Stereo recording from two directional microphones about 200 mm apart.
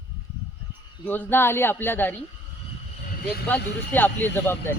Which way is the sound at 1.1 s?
10° left (ahead or behind).